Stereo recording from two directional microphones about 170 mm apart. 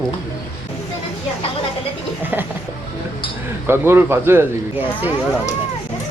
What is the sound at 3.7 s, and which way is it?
Speech, 15° right (ahead or behind).